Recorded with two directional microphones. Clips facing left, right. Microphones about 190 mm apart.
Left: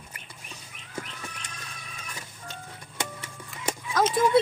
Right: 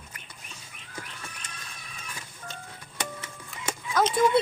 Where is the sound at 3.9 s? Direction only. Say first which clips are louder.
Left 1 dB; 5° left (ahead or behind).